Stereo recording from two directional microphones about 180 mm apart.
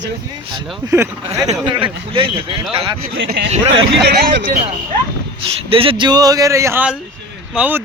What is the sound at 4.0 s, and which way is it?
Speech, 65° right (ahead or behind).